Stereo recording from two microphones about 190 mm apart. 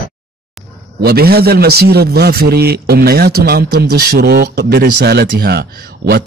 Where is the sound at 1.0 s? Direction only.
55° right (ahead or behind).